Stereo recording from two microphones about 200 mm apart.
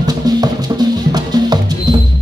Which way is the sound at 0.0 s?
20° right (ahead or behind).